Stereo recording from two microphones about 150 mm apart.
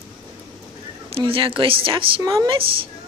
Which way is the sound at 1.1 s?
35° right (ahead or behind).